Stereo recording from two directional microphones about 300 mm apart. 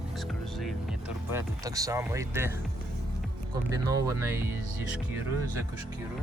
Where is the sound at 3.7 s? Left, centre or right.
Centre.